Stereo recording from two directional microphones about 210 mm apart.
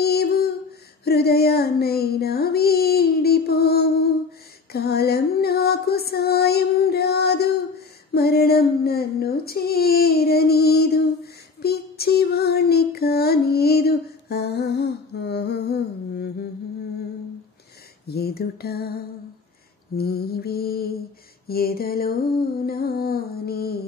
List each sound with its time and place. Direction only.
0.0 s a sound: 50° left (ahead or behind)
1.0 s female singing: 50° left (ahead or behind)
8.1 s child singing: 50° left (ahead or behind)
11.6 s music: 50° left (ahead or behind)
18.0 s music: 50° left (ahead or behind)
20.0 s music: 50° left (ahead or behind)